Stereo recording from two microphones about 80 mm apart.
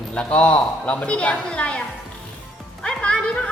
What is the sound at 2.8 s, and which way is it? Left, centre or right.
Music, centre.